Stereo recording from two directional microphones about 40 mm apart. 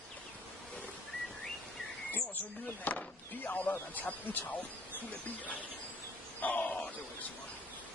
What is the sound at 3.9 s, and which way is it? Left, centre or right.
Speech, left.